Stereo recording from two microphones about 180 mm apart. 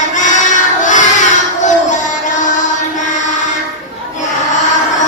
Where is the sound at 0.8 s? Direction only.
45° left (ahead or behind).